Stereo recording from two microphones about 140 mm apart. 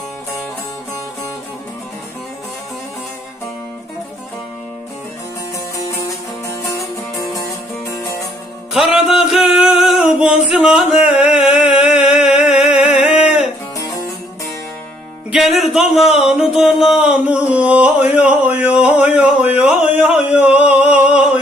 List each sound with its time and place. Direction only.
8.7 s music: 5° right (ahead or behind)
10.4 s a sound: 5° right (ahead or behind)
13.1 s music: 10° right (ahead or behind)
15.3 s music: centre (ahead or behind)